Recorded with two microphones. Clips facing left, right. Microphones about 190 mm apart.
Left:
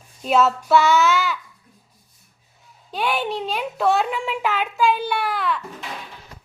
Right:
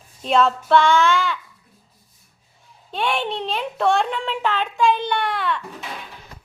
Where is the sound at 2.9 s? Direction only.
5° left (ahead or behind).